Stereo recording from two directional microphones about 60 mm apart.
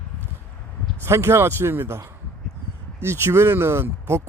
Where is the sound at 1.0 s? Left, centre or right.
Right.